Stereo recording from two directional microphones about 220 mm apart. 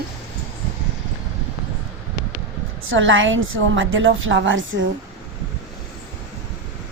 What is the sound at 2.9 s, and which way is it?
A woman's voice, 60° right (ahead or behind).